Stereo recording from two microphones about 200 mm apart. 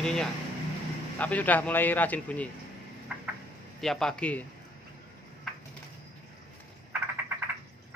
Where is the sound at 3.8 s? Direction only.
Centre (ahead or behind).